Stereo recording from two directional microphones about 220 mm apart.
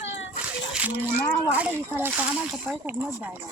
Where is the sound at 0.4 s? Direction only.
5° right (ahead or behind).